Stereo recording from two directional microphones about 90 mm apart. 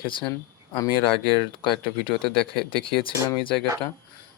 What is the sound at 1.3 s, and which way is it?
Speech, 65° left (ahead or behind).